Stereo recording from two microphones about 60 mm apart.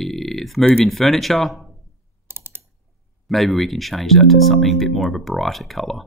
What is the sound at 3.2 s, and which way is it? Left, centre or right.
Speech, centre.